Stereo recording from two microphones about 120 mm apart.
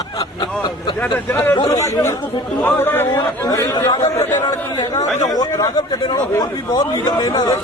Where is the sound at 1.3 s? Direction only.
15° left (ahead or behind).